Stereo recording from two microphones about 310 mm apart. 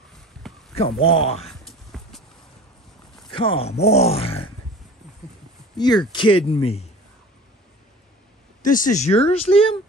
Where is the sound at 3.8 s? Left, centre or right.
Centre.